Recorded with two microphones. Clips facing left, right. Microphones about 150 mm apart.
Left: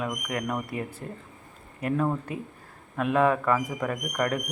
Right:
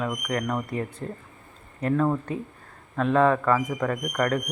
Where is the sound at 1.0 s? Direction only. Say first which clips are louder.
Right 4 dB; 40° right (ahead or behind).